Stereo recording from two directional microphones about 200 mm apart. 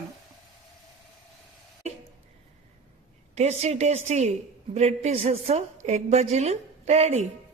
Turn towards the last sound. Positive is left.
turn(degrees=-35)  # may be behind; listen again after turning